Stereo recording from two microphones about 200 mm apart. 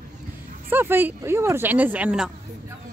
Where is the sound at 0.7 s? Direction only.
10° right (ahead or behind).